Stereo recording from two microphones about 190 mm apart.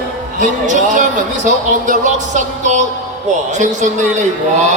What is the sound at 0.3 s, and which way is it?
A man's voice, 45° right (ahead or behind).